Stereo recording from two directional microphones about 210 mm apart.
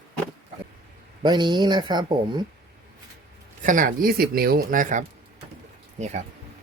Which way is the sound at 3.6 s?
40° right (ahead or behind).